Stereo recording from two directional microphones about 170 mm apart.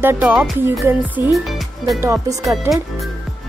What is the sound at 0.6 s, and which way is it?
Speech, 15° right (ahead or behind).